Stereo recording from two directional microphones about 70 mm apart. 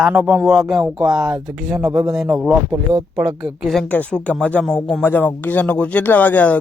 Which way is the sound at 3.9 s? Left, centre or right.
Centre.